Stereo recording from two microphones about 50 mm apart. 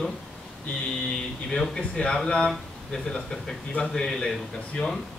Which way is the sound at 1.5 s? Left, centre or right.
Centre.